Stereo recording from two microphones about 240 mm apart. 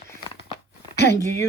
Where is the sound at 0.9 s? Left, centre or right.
Left.